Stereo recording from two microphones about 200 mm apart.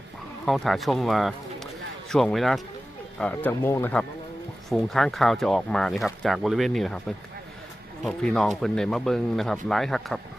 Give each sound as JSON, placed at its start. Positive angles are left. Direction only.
{"t": 0.4, "sound": "speech", "side_deg": 0}
{"t": 8.0, "sound": "speech", "side_deg": 5}